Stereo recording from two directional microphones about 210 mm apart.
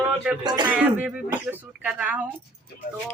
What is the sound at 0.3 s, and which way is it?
Speech, 5° right (ahead or behind).